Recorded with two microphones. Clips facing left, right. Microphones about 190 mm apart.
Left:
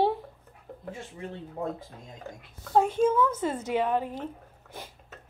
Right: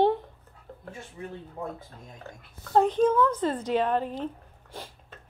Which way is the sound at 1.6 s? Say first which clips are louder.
Left 4 dB; 20° left (ahead or behind).